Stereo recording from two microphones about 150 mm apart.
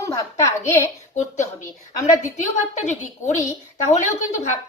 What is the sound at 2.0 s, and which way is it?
Speech, 55° left (ahead or behind).